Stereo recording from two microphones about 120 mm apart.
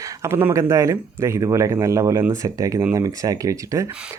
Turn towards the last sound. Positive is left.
turn(degrees=-25)  # may be behind; listen again after turning